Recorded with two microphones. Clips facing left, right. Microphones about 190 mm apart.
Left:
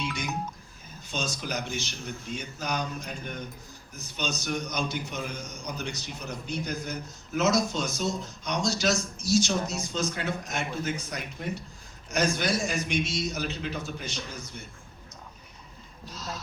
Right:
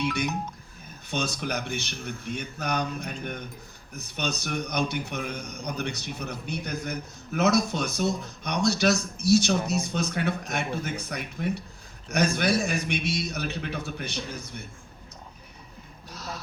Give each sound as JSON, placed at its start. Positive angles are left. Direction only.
{"t": 0.0, "sound": "a man's voice", "side_deg": -60}
{"t": 16.1, "sound": "speech", "side_deg": -60}